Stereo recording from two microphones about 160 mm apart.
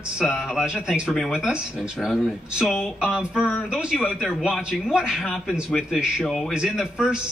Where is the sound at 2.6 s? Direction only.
5° right (ahead or behind).